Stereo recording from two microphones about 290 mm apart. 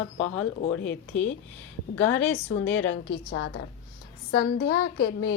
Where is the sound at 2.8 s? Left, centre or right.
Left.